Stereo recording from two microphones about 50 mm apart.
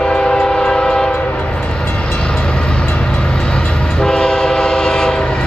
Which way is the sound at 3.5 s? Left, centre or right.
Centre.